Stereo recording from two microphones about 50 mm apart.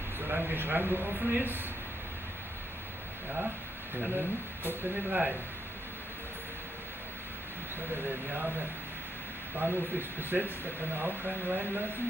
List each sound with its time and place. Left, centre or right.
0.3 s speech: right
4.2 s speech: right
7.9 s speech: right
9.6 s speech: right